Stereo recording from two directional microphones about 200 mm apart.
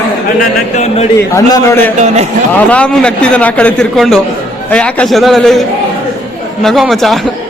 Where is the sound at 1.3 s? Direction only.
15° left (ahead or behind).